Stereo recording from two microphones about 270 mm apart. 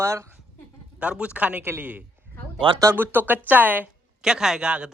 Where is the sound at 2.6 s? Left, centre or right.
Centre.